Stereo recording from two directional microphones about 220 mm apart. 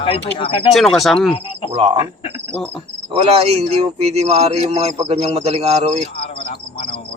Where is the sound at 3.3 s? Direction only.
30° right (ahead or behind).